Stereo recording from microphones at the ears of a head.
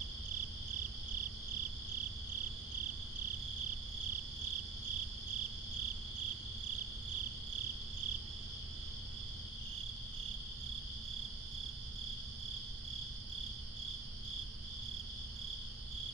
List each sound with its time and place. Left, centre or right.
0.3 s cricket: right